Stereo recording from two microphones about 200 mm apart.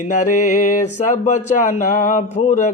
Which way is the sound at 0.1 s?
40° left (ahead or behind).